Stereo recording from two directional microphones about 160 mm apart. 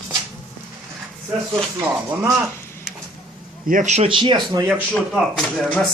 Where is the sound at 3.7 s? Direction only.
50° right (ahead or behind); by 4.7 s 25° right (ahead or behind).